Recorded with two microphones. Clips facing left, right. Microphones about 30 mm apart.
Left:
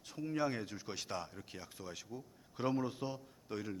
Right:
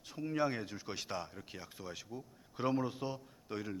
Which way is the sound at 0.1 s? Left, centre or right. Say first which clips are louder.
Right 2 dB; centre.